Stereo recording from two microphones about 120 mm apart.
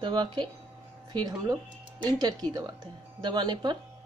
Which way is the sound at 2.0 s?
35° right (ahead or behind).